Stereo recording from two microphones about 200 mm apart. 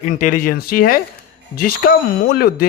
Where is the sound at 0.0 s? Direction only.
40° left (ahead or behind).